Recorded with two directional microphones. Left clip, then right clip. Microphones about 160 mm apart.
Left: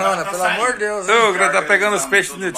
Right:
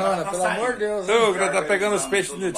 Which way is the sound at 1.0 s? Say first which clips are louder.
Left 6 dB; 10° left (ahead or behind).